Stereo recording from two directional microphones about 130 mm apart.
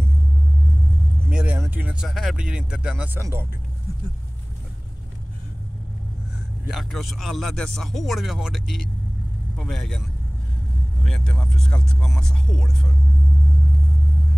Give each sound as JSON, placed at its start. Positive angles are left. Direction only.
{"t": 1.3, "sound": "vehicle", "side_deg": -10}
{"t": 1.6, "sound": "speech", "side_deg": -15}
{"t": 3.2, "sound": "speech", "side_deg": -25}
{"t": 6.7, "sound": "speech", "side_deg": 0}
{"t": 11.1, "sound": "speech", "side_deg": 5}